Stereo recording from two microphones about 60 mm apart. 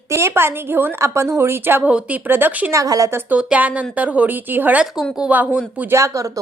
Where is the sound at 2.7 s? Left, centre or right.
Right.